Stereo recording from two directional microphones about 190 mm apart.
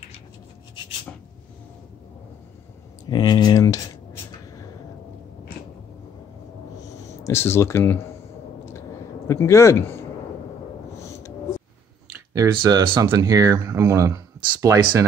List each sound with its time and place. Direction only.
3.1 s a sound: 20° left (ahead or behind)
7.2 s speech: 15° left (ahead or behind)
9.3 s speech: 15° left (ahead or behind)
12.4 s speech: 20° right (ahead or behind)